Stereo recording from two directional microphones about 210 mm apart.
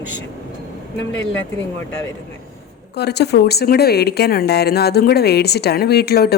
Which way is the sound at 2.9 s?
50° left (ahead or behind).